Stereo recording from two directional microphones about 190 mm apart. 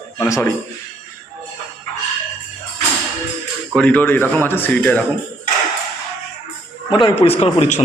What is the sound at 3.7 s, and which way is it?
A man's voice, 10° left (ahead or behind).